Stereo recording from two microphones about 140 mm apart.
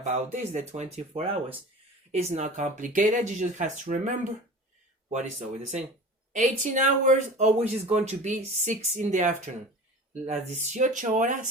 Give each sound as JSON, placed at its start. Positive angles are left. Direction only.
{"t": 0.3, "sound": "speech", "side_deg": -55}